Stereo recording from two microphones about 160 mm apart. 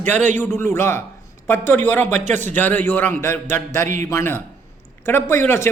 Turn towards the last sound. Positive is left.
turn(degrees=15)  # may be behind; listen again after turning